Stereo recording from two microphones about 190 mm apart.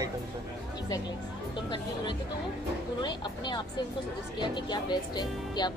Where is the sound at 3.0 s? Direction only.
25° left (ahead or behind).